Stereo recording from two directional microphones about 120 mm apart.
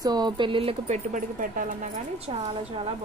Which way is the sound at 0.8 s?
85° right.